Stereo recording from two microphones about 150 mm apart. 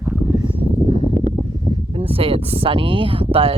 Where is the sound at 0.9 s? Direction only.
45° right (ahead or behind).